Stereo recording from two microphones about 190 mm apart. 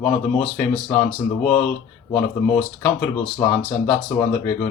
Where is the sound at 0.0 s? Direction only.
5° left (ahead or behind).